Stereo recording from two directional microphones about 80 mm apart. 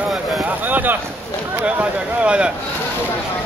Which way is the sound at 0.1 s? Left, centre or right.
Centre.